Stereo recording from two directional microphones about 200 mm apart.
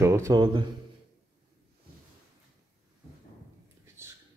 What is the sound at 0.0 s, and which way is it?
Speech, 15° right (ahead or behind).